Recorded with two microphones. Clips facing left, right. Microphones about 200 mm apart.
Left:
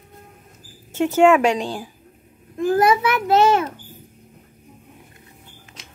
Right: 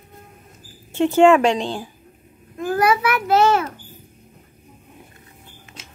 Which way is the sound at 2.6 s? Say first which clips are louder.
Left 2 dB; 20° left (ahead or behind).